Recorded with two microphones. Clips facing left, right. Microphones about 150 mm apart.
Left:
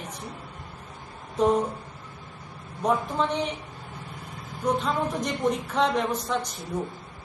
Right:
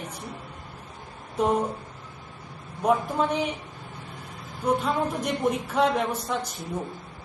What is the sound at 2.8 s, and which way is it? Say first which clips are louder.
Speech: right 2 dB; 10° right (ahead or behind).